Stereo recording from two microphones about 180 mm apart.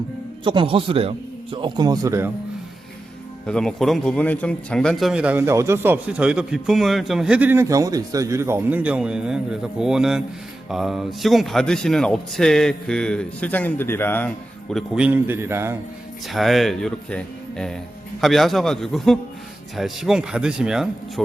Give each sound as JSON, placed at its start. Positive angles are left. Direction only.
{"t": 0.4, "sound": "a man's voice", "side_deg": -30}
{"t": 3.4, "sound": "a man's voice", "side_deg": 5}
{"t": 16.3, "sound": "a man's voice", "side_deg": 0}